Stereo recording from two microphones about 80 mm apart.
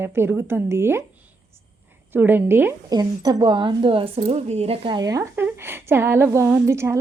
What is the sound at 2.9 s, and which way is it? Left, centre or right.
Speech, right.